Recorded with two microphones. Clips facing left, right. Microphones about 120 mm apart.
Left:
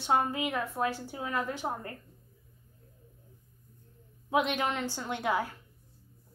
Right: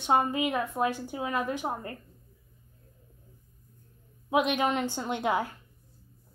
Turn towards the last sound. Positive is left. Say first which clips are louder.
# right 2 dB
turn(degrees=-20)  # may be behind; listen again after turning